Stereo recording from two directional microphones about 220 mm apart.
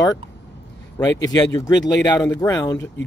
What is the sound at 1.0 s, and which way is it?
Speech, 15° left (ahead or behind).